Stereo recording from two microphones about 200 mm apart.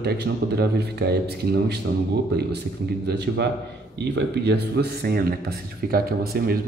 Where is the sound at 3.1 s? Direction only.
55° right (ahead or behind).